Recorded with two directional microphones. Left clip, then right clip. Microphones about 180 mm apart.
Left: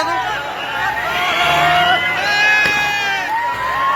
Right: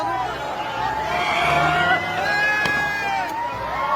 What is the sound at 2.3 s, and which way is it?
Run, 65° right (ahead or behind).